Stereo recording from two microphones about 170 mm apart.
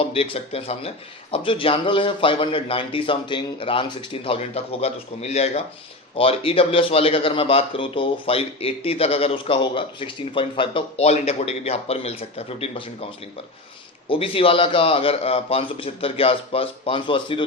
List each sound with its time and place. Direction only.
0.0 s a man's voice: 35° left (ahead or behind)
14.1 s a man's voice: 35° left (ahead or behind)